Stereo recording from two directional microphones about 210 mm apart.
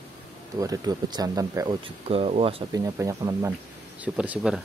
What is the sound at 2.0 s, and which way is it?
Speech, 30° right (ahead or behind).